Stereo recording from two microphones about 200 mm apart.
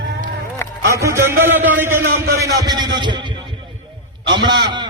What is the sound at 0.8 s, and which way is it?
A man's voice, 15° right (ahead or behind).